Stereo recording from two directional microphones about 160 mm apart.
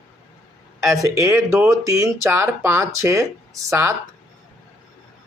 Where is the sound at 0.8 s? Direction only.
20° right (ahead or behind).